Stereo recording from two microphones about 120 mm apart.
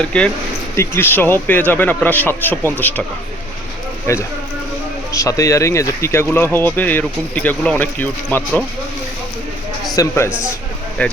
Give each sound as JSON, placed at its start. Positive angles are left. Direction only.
{"t": 0.0, "sound": "speech", "side_deg": 10}
{"t": 0.8, "sound": "speech", "side_deg": 20}
{"t": 4.0, "sound": "speech", "side_deg": 20}
{"t": 9.9, "sound": "a man's voice", "side_deg": 25}
{"t": 10.2, "sound": "a man's voice", "side_deg": -10}
{"t": 11.0, "sound": "speech", "side_deg": 10}